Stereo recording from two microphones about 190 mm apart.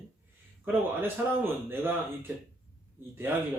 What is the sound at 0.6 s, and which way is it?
A man's voice, 10° right (ahead or behind).